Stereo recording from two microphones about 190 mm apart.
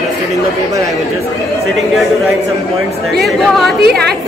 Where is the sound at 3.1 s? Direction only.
Centre (ahead or behind).